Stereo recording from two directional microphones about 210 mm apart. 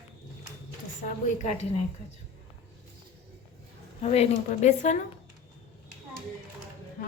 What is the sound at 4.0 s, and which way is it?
A woman's voice, 30° left (ahead or behind).